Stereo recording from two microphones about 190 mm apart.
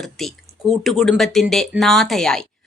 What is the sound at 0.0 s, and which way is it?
A woman's voice, centre (ahead or behind).